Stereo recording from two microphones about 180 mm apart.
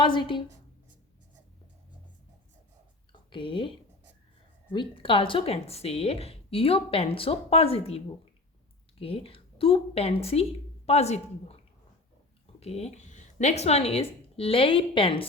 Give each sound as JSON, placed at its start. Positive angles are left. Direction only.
{"t": 0.0, "sound": "a woman's voice", "side_deg": 25}
{"t": 3.1, "sound": "a sound", "side_deg": 30}
{"t": 4.7, "sound": "speech", "side_deg": 30}
{"t": 12.5, "sound": "speech", "side_deg": 35}